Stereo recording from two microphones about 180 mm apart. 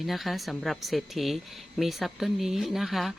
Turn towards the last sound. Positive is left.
turn(degrees=0)  # may be behind; listen again after turning